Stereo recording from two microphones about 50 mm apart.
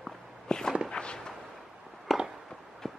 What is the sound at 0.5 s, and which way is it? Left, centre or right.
Walk, centre.